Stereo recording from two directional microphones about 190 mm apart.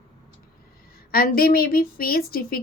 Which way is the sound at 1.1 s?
50° left (ahead or behind).